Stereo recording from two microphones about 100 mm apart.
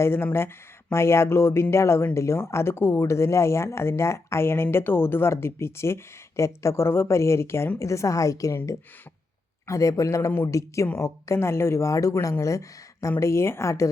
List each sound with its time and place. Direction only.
0.0 s speech: 25° left (ahead or behind)